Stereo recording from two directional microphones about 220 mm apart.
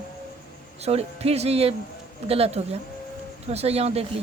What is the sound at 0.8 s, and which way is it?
Speech, 30° right (ahead or behind).